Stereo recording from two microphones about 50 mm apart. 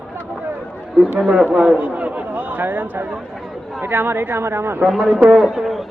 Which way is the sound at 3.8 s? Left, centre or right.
Right.